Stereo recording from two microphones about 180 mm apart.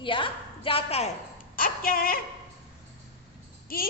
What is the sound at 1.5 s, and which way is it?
Speech, 55° left (ahead or behind).